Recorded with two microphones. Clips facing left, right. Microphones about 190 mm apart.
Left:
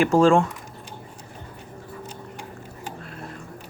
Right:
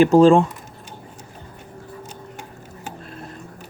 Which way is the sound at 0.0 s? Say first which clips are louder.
Right 5 dB; 20° right (ahead or behind).